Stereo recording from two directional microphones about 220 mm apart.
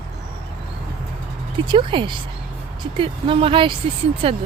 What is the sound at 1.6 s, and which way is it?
Speech, 20° right (ahead or behind).